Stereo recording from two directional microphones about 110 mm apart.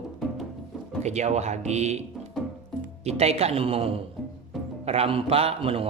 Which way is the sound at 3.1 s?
75° right (ahead or behind).